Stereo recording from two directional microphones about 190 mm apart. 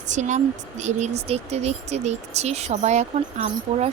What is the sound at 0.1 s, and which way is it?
Speech, 40° right (ahead or behind).